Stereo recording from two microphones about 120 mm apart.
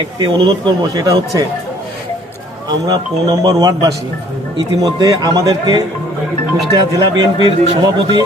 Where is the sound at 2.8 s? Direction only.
35° right (ahead or behind).